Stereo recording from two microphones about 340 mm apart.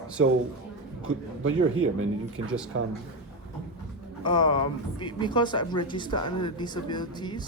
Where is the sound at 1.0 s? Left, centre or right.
Right.